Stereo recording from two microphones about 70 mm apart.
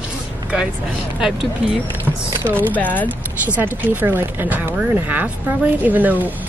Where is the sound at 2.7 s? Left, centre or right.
Left.